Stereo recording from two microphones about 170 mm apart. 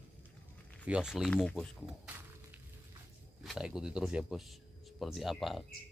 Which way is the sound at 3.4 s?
Centre (ahead or behind).